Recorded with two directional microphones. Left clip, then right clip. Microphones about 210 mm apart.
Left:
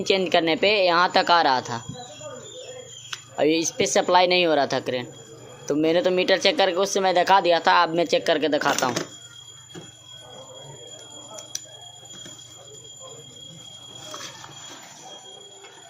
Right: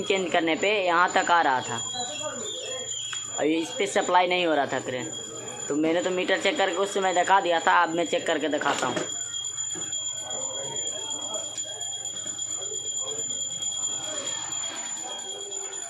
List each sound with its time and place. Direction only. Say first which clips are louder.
0.0 s speech: left 4 dB; 35° left (ahead or behind)
3.1 s a sound: left 5 dB; 40° left (ahead or behind)
3.9 s speech: left 4 dB; 35° left (ahead or behind)